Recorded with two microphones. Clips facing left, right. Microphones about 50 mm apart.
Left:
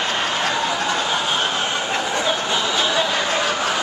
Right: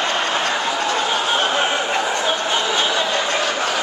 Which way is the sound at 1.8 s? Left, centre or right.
Centre.